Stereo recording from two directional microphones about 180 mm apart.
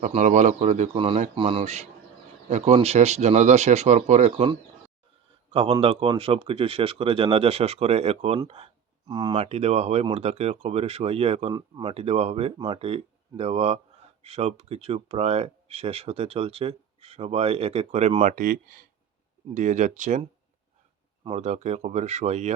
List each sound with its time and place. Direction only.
0.1 s speech: 40° right (ahead or behind)
8.4 s a sound: 35° right (ahead or behind)
9.3 s speech: 35° right (ahead or behind)
21.2 s speech: 40° right (ahead or behind)